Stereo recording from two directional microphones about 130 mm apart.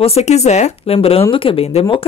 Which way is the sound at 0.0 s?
55° left (ahead or behind).